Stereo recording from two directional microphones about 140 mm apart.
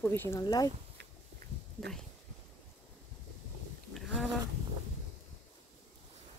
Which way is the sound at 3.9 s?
Centre (ahead or behind).